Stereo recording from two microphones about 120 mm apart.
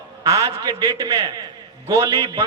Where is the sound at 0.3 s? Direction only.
30° right (ahead or behind).